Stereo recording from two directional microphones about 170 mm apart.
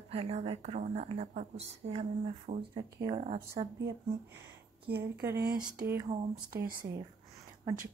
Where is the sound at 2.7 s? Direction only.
25° right (ahead or behind).